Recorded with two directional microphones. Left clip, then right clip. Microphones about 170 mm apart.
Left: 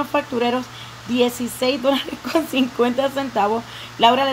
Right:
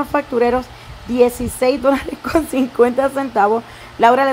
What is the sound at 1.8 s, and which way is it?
Speech, 5° right (ahead or behind).